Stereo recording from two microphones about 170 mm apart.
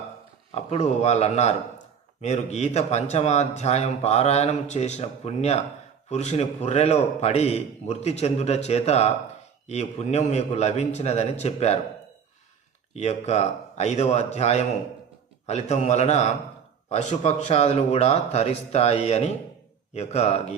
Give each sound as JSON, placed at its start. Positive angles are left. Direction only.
{"t": 0.5, "sound": "speech", "side_deg": 40}
{"t": 12.9, "sound": "speech", "side_deg": 40}